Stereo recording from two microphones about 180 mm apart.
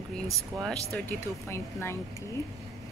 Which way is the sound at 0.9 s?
10° left (ahead or behind).